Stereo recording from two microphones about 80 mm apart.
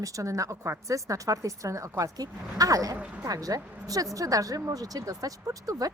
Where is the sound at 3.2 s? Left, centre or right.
Right.